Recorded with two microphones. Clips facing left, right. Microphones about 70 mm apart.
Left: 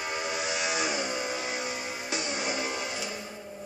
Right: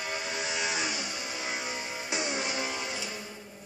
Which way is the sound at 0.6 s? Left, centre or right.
Centre.